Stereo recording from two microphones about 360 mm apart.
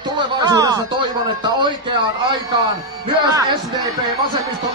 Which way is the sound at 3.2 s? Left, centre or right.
Centre.